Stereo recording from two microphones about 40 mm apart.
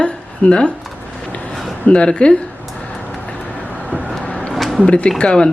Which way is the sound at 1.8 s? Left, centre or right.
Left.